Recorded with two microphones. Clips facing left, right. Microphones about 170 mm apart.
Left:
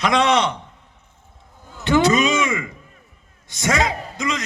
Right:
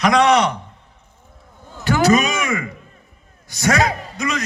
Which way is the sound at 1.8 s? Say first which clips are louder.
Right 1 dB; 25° left (ahead or behind).